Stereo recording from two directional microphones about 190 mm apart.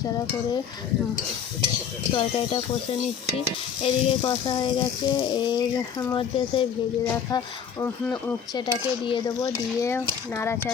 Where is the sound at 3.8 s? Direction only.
25° left (ahead or behind).